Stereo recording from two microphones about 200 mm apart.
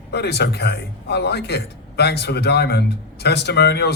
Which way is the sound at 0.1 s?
55° left (ahead or behind).